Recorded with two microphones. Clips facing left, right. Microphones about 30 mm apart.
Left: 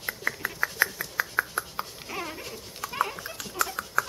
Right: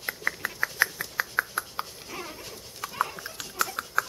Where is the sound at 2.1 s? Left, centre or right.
Centre.